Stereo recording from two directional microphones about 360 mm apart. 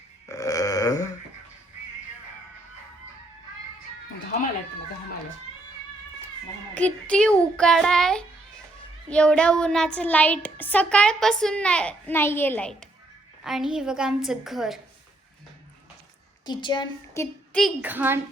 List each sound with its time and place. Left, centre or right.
0.3 s burping: centre
6.7 s a child's voice: centre
16.5 s a child's voice: centre